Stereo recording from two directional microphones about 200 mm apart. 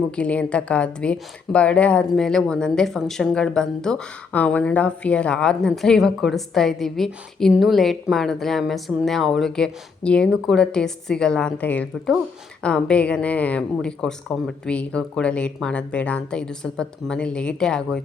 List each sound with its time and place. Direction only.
0.2 s a woman's voice: 5° left (ahead or behind)